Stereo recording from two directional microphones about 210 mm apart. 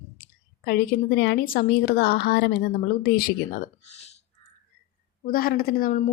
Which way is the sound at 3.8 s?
30° left (ahead or behind).